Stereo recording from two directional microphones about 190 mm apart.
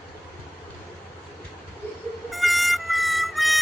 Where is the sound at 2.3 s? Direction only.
Centre (ahead or behind).